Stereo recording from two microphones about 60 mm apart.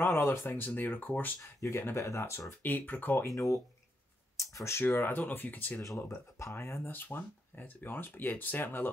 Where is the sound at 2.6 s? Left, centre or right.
Left.